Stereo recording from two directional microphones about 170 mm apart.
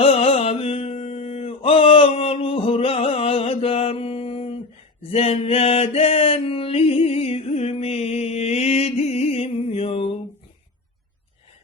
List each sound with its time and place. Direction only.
0.0 s mantra: 35° left (ahead or behind)